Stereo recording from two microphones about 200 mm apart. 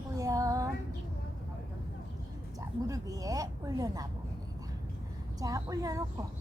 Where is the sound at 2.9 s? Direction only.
15° right (ahead or behind).